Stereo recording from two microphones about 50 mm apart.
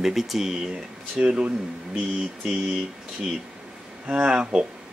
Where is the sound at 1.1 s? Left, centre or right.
Right.